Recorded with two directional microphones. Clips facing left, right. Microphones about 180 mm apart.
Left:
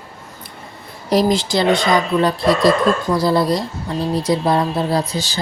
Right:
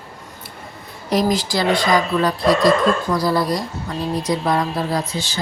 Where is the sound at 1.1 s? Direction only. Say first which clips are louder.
Left 3 dB; 30° left (ahead or behind).